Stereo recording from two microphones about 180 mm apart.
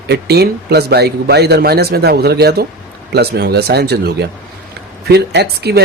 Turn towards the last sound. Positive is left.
turn(degrees=-65)  # may be behind; listen again after turning